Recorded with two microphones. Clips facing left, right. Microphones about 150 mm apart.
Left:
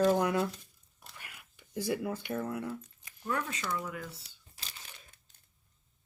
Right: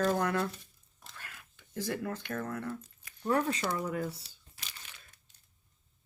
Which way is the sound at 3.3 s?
35° right (ahead or behind).